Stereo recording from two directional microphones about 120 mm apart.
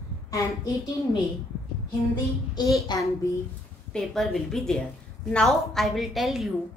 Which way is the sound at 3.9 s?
5° left (ahead or behind).